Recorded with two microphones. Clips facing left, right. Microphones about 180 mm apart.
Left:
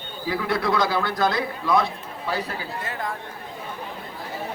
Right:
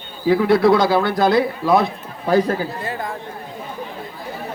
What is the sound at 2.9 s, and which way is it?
Speech, 25° right (ahead or behind).